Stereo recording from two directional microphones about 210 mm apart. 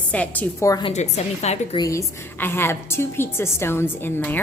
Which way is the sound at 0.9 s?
35° left (ahead or behind).